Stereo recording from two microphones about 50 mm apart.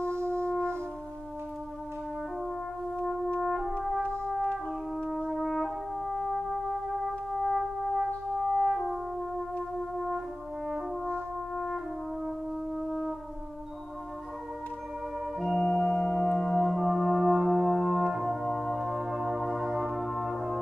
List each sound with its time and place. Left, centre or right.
0.0 s brass instrument: right
3.3 s brass instrument: centre
5.0 s brass instrument: centre
9.6 s brass instrument: centre
11.5 s brass instrument: centre
15.3 s music: centre
18.8 s music: centre